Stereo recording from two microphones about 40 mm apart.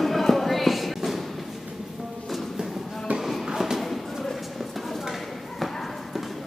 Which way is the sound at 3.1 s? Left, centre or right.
Right.